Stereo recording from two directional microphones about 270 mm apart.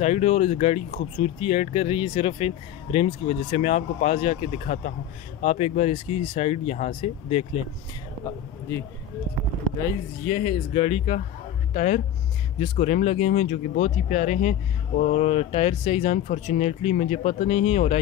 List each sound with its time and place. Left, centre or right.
0.0 s speech: left
10.3 s speech: left